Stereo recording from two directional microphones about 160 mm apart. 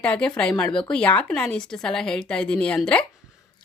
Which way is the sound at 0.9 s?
10° left (ahead or behind).